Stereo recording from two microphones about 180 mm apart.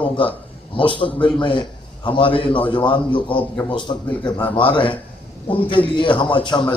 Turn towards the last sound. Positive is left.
turn(degrees=25)  # may be behind; listen again after turning